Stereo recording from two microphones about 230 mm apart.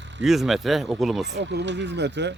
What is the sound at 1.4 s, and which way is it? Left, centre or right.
Speech, right.